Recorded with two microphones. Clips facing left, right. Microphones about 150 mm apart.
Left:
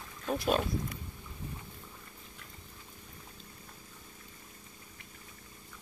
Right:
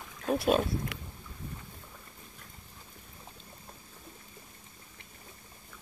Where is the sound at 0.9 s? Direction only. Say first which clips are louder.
Right 1 dB; 75° right (ahead or behind).